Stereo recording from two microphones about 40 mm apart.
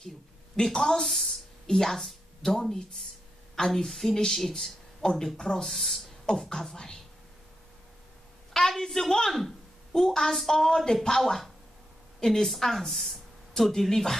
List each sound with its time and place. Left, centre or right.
0.6 s a woman's voice: centre
5.7 s a woman's voice: centre
6.2 s a woman's voice: centre
8.5 s a woman's voice: centre
12.2 s a woman's voice: centre